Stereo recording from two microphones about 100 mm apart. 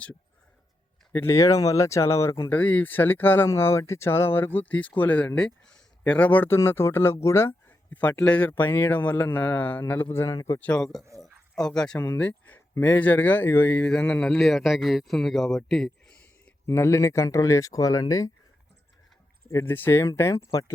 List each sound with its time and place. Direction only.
1.1 s speech: 25° left (ahead or behind)
2.5 s speech: 15° left (ahead or behind)
7.9 s speech: 15° left (ahead or behind); by 10.6 s 30° left (ahead or behind)
10.6 s speech: 10° left (ahead or behind)
11.2 s a sound: 5° left (ahead or behind)
12.0 s a man's voice: 15° left (ahead or behind)
16.6 s speech: 30° left (ahead or behind)
19.5 s speech: 25° left (ahead or behind)